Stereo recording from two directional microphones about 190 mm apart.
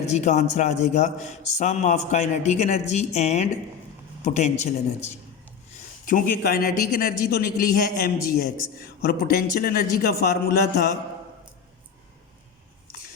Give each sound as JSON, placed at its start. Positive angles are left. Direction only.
{"t": 0.0, "sound": "a man's voice", "side_deg": 35}